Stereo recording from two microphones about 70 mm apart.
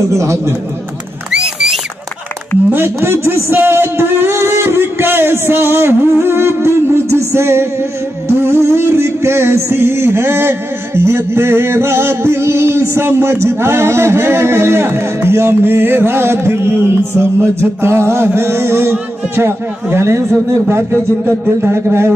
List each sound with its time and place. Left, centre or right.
0.0 s speech: right
1.3 s a sound: centre
2.7 s a man's voice: right
8.3 s music: right